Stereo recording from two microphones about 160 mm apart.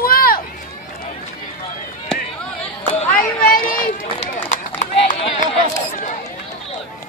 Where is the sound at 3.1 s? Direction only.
65° left (ahead or behind).